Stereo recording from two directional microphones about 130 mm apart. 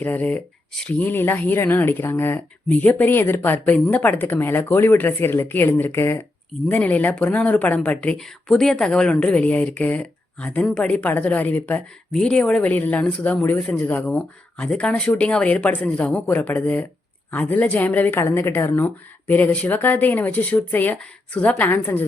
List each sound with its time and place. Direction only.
0.0 s speech: 15° left (ahead or behind)